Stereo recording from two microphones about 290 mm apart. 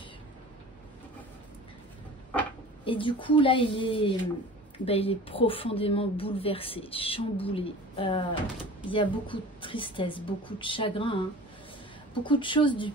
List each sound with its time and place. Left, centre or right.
2.8 s a woman's voice: centre